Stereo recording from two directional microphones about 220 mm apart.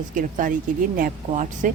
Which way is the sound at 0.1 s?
35° right (ahead or behind).